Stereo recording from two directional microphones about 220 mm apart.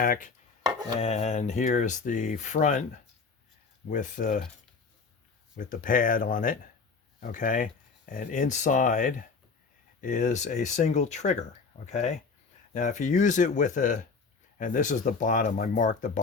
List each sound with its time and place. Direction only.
0.0 s speech: 40° left (ahead or behind)
0.6 s chopping: 15° right (ahead or behind)
0.9 s speech: 30° left (ahead or behind)
3.8 s speech: 35° left (ahead or behind)
5.5 s speech: 40° left (ahead or behind)